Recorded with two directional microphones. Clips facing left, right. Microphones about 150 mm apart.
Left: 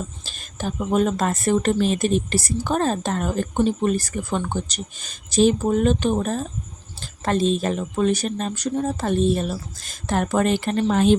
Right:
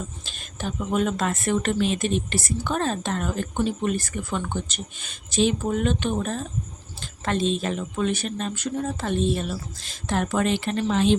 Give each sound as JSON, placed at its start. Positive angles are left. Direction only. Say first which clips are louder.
{"t": 0.3, "sound": "speech", "louder": "left 3 dB", "side_deg": 40}